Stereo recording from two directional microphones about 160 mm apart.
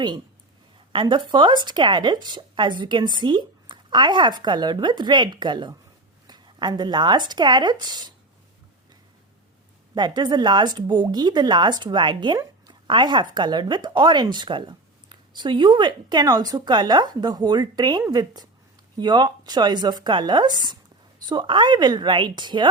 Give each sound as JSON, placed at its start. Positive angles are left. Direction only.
{"t": 0.9, "sound": "speech", "side_deg": -30}
{"t": 9.9, "sound": "speech", "side_deg": -25}